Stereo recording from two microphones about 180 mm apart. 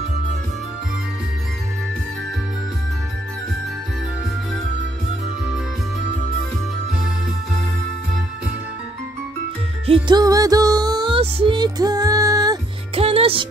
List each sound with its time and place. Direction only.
9.8 s music: 25° right (ahead or behind)
12.9 s music: 30° right (ahead or behind)